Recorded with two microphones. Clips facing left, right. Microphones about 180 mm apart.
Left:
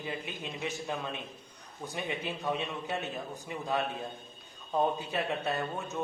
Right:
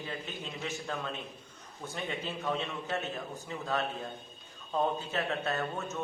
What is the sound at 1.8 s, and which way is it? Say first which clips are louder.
A man's voice: left 1 dB; 15° left (ahead or behind).